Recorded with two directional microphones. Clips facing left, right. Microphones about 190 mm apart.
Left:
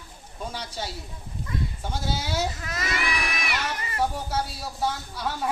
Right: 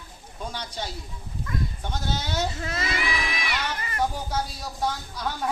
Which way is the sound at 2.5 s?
30° right (ahead or behind).